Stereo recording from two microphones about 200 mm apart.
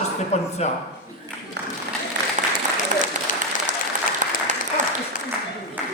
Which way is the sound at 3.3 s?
40° left (ahead or behind).